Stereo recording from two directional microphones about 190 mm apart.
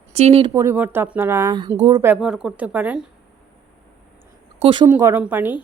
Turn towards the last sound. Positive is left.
turn(degrees=-10)  # may be behind; listen again after turning